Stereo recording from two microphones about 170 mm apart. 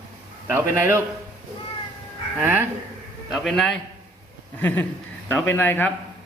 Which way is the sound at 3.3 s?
Centre (ahead or behind).